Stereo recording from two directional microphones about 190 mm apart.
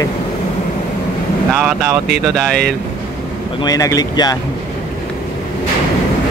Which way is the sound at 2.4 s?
5° left (ahead or behind).